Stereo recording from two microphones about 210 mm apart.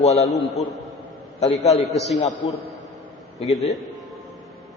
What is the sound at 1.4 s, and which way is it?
Speech, 30° left (ahead or behind).